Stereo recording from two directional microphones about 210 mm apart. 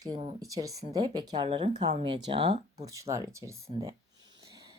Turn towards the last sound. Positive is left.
turn(degrees=-15)  # may be behind; listen again after turning